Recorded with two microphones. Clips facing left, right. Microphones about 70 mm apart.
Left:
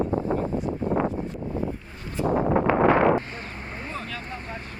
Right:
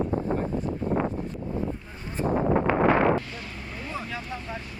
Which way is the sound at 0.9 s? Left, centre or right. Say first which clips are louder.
Left 3 dB; left.